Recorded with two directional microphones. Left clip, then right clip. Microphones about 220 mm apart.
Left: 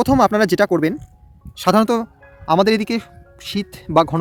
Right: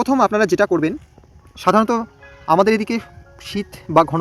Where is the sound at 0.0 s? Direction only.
25° left (ahead or behind).